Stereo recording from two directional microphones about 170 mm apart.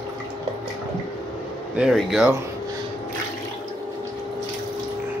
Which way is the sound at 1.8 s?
Centre (ahead or behind).